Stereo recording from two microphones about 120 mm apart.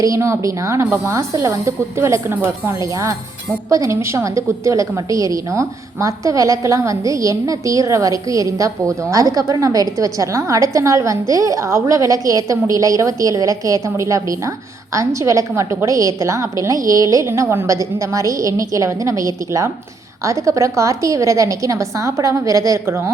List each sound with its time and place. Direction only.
0.0 s a woman's voice: 25° right (ahead or behind)